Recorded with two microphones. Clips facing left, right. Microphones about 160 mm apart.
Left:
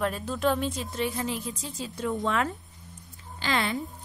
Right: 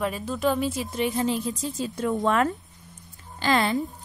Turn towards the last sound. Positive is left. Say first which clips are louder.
# right 5 dB
turn(degrees=-40)  # may be behind; listen again after turning